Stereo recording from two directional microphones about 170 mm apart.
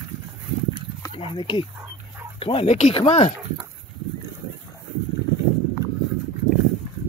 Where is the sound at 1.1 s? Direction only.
30° left (ahead or behind).